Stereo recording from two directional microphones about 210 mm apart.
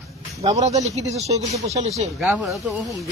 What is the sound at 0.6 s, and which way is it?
Speech, 30° right (ahead or behind).